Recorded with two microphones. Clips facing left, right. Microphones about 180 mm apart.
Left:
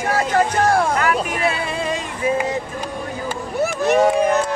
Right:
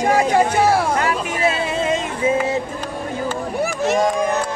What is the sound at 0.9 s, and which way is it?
Vehicle, 25° right (ahead or behind).